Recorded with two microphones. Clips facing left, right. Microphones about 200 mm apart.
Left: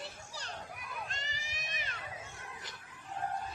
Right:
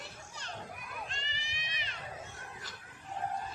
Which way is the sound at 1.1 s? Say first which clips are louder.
Even; 45° left (ahead or behind).